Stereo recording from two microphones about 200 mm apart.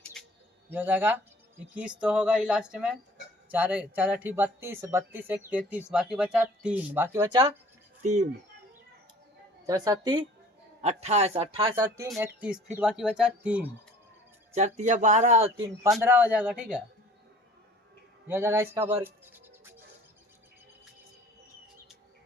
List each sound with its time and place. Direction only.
0.0 s a sound: 5° left (ahead or behind)
0.7 s speech: 10° right (ahead or behind)
8.0 s a man's voice: 35° right (ahead or behind)
9.6 s a woman's voice: 20° right (ahead or behind)
10.8 s a man's voice: 35° right (ahead or behind)
11.8 s speech: 15° right (ahead or behind)
14.5 s a man's voice: 35° right (ahead or behind)
16.0 s speech: 10° right (ahead or behind)
18.3 s speech: 10° right (ahead or behind)